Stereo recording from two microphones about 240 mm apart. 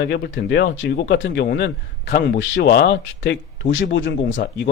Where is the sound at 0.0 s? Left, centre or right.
Left.